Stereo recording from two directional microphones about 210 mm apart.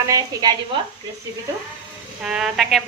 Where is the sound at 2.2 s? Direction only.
5° right (ahead or behind).